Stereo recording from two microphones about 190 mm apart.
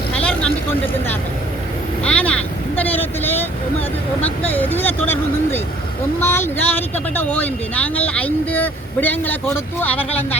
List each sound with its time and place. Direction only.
0.2 s vehicle: 5° left (ahead or behind)
2.0 s vehicle: 5° left (ahead or behind)
4.5 s vehicle: 10° left (ahead or behind)
6.1 s speech: 10° left (ahead or behind)